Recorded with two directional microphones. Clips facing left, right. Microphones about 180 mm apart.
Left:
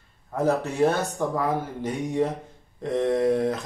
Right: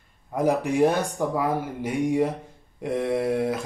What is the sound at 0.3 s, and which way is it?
A man's voice, 15° right (ahead or behind).